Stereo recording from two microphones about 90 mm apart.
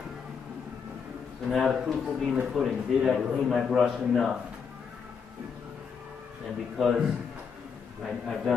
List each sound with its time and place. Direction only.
1.5 s a man's voice: centre (ahead or behind)
6.8 s a man's voice: centre (ahead or behind)